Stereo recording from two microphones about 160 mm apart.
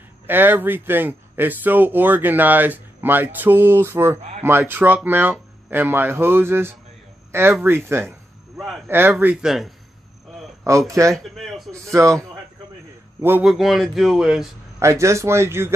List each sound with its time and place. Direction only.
0.3 s speech: 10° right (ahead or behind)
10.9 s speech: 20° right (ahead or behind)
11.3 s a sound: centre (ahead or behind)
11.7 s speech: 20° right (ahead or behind)
13.5 s speech: centre (ahead or behind)
14.8 s speech: 20° right (ahead or behind)